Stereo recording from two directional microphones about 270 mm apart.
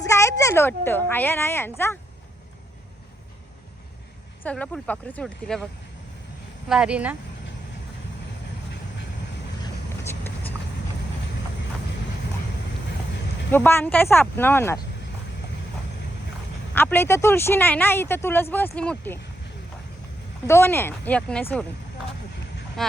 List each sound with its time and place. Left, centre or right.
0.0 s a woman's voice: centre
4.4 s speech: centre
6.7 s speech: centre
10.1 s vehicle: centre
13.5 s speech: centre
16.7 s speech: centre
20.5 s speech: centre
22.8 s speech: centre